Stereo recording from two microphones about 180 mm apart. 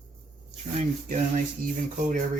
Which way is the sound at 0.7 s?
45° right (ahead or behind).